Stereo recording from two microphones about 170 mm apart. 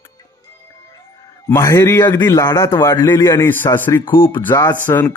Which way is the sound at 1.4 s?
20° left (ahead or behind).